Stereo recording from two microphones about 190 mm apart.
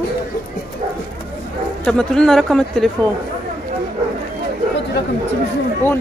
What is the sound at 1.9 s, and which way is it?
Speech, 5° left (ahead or behind).